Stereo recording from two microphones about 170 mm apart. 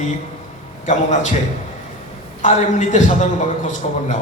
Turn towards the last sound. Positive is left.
turn(degrees=45)  # may be behind; listen again after turning